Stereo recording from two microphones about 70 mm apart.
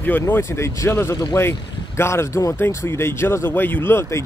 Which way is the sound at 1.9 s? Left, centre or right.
Left.